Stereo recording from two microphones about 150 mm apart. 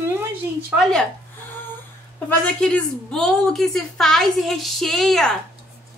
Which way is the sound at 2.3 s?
5° left (ahead or behind).